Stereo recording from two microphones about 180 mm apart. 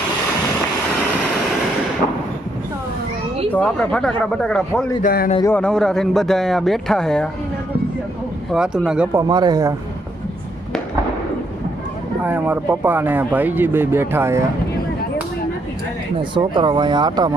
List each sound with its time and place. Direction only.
3.5 s a man's voice: 5° left (ahead or behind)
5.0 s speech: 55° left (ahead or behind)
5.5 s a man's voice: 5° left (ahead or behind)
8.5 s a man's voice: 5° right (ahead or behind)
9.2 s speech: 20° right (ahead or behind)
12.2 s speech: 10° right (ahead or behind)
16.3 s speech: 25° right (ahead or behind)